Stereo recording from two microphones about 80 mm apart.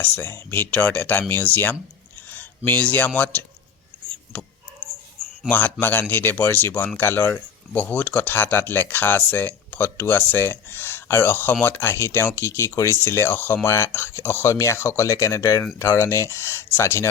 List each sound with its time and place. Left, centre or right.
0.0 s speech: left
2.3 s a sound: left
4.3 s speech: centre; by 17.1 s left